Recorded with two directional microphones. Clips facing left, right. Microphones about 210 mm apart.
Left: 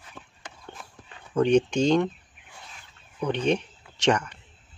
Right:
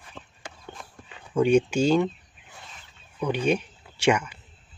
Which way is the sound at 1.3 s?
10° right (ahead or behind).